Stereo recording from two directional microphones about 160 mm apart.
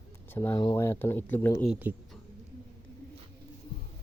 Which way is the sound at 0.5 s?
20° left (ahead or behind).